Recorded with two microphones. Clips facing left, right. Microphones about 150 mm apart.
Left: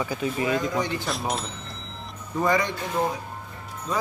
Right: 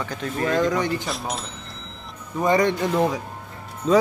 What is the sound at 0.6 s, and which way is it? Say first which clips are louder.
Speech: right 5 dB; 85° right.